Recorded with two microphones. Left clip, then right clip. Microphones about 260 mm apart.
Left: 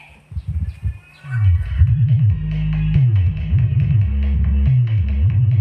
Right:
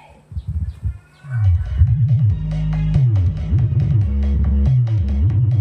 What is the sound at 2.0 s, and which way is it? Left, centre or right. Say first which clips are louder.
Music: even; right.